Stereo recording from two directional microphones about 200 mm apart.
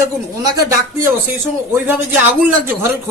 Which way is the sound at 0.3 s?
20° right (ahead or behind).